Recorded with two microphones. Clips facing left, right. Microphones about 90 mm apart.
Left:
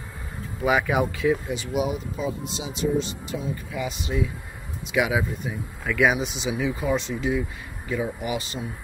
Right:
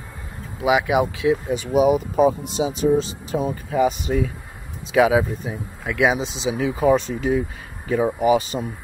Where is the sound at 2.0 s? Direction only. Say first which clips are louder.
Right 11 dB; 55° right (ahead or behind).